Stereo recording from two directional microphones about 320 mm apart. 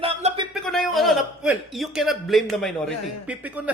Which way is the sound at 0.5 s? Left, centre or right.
Centre.